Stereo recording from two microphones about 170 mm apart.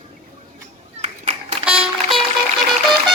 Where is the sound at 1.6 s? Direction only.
Centre (ahead or behind).